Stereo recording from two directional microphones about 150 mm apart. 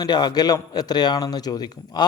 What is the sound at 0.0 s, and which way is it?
A man's voice, 30° left (ahead or behind).